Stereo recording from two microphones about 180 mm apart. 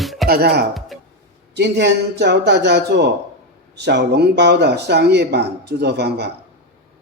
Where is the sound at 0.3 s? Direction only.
60° right (ahead or behind).